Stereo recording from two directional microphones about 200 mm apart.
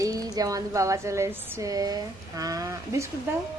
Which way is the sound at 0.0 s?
15° right (ahead or behind).